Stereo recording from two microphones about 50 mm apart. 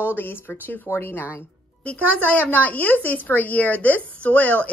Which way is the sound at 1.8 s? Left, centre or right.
Left.